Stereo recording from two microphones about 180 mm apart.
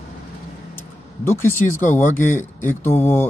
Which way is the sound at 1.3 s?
15° left (ahead or behind).